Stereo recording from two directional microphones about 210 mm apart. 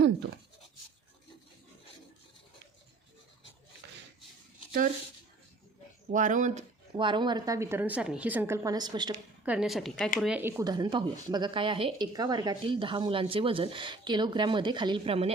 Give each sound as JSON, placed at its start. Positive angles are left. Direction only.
{"t": 6.1, "sound": "speech", "side_deg": -40}
{"t": 6.9, "sound": "a woman's voice", "side_deg": -20}
{"t": 9.4, "sound": "a woman's voice", "side_deg": -5}
{"t": 10.6, "sound": "speech", "side_deg": -20}